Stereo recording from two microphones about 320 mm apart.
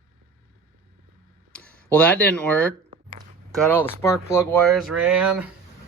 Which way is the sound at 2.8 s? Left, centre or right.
Centre.